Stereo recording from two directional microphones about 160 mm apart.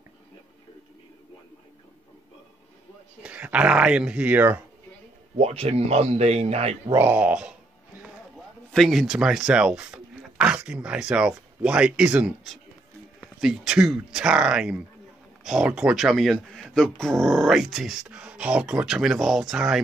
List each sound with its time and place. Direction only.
3.2 s speech: 10° right (ahead or behind)
5.4 s speech: 40° right (ahead or behind)
6.9 s speech: 10° right (ahead or behind)
8.7 s speech: centre (ahead or behind)